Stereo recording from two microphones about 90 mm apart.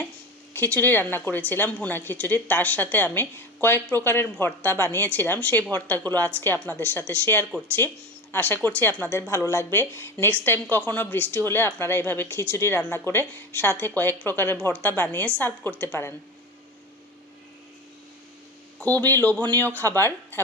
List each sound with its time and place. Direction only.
0.5 s speech: 20° left (ahead or behind)
18.8 s speech: 20° left (ahead or behind)